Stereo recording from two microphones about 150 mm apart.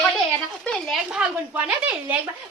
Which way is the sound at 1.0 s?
10° right (ahead or behind).